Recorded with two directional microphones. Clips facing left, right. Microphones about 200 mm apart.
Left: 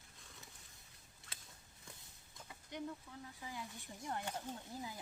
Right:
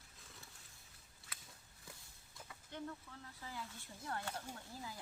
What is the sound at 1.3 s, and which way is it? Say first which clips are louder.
Biting: even; 5° right (ahead or behind).